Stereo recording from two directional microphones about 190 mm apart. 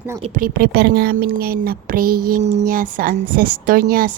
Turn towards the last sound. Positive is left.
turn(degrees=-50)  # may be behind; listen again after turning